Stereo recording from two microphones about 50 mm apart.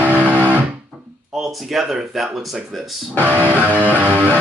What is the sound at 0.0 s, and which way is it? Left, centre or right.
Music, right.